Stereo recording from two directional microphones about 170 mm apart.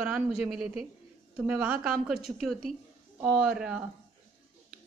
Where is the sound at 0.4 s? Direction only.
5° right (ahead or behind).